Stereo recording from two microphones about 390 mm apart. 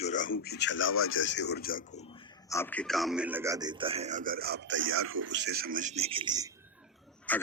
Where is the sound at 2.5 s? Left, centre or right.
Centre.